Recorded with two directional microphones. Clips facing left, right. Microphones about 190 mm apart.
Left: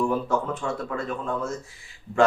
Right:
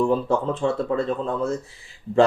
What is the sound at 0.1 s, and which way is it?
Speech, 30° right (ahead or behind).